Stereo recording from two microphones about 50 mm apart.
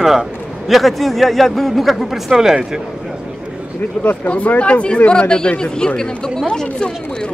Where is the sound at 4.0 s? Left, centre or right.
Left; by 6.9 s centre.